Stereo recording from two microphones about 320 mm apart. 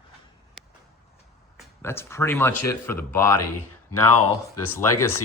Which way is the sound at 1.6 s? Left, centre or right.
Centre.